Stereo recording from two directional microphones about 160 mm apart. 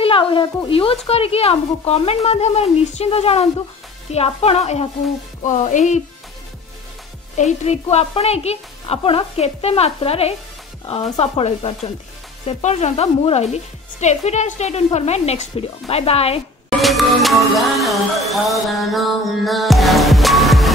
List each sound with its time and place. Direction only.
0.0 s speech: 35° left (ahead or behind); by 6.0 s 50° left (ahead or behind)
7.3 s speech: 45° left (ahead or behind)
16.8 s music: centre (ahead or behind)